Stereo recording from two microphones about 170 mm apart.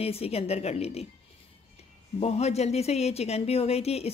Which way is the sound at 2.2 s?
40° left (ahead or behind).